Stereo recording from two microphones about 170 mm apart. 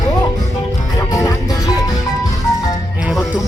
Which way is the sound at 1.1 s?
20° left (ahead or behind).